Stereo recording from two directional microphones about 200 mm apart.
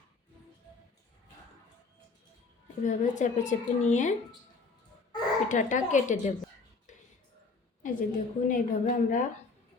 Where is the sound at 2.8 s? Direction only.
40° left (ahead or behind).